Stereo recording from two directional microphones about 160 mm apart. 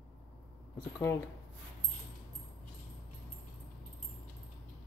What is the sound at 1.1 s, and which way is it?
Speech, 20° left (ahead or behind).